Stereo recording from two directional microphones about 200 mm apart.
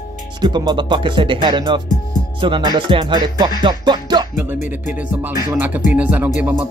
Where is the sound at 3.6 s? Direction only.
20° right (ahead or behind).